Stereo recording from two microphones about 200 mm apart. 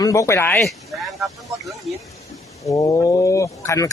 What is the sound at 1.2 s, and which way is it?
Speech, 15° right (ahead or behind).